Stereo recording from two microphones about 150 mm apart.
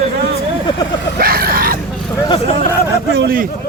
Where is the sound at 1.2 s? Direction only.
90° right.